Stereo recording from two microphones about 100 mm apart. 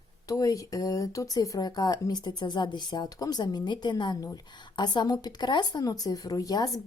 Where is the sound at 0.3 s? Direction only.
35° left (ahead or behind).